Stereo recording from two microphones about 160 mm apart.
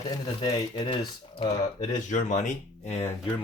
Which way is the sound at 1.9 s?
50° left (ahead or behind).